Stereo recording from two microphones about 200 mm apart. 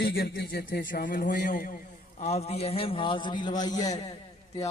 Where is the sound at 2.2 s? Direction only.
35° left (ahead or behind).